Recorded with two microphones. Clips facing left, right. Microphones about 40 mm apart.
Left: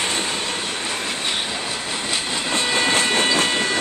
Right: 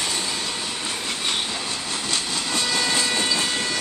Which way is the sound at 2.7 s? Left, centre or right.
Left.